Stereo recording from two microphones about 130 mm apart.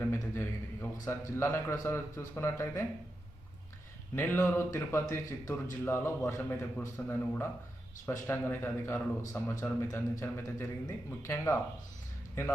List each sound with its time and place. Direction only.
0.0 s a sound: 20° left (ahead or behind)
1.0 s speech: 20° left (ahead or behind)
4.1 s speech: 15° left (ahead or behind)